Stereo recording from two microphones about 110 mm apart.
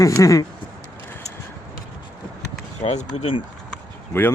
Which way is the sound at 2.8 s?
90° left.